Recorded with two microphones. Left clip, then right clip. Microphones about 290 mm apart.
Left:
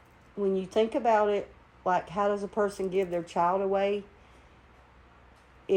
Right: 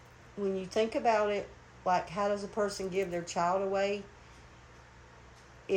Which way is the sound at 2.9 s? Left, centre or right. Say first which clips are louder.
Left 5 dB; left.